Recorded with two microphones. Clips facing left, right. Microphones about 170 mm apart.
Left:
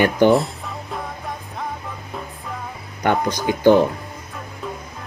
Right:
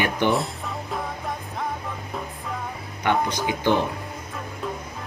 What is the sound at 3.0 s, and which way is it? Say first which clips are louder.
Speech: left 3 dB; 45° left (ahead or behind).